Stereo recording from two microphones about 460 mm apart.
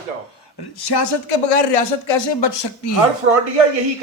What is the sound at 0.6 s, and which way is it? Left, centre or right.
A man's voice, left.